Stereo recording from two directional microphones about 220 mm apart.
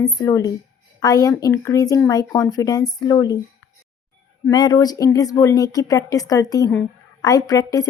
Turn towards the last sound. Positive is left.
turn(degrees=15)  # may be behind; listen again after turning